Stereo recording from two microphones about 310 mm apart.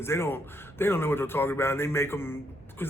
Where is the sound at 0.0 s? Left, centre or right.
Centre.